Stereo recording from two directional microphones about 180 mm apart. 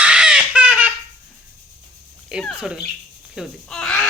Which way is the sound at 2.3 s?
5° right (ahead or behind).